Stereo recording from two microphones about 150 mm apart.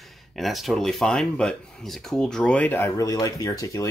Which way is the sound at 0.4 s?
Centre (ahead or behind).